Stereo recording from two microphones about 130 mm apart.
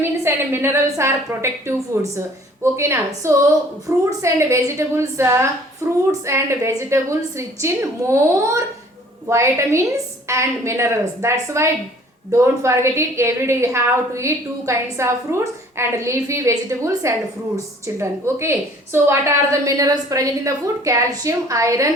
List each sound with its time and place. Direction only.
0.0 s a woman's voice: 15° right (ahead or behind)